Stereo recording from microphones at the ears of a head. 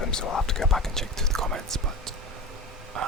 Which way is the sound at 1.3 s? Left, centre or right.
Right.